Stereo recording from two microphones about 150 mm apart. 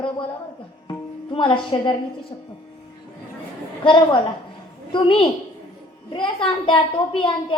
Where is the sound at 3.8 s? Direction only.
35° left (ahead or behind).